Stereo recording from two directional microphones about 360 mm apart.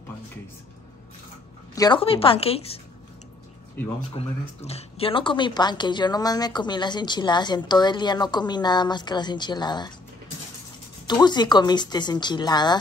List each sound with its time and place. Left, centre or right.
1.8 s speech: centre
4.1 s speech: centre
11.1 s speech: centre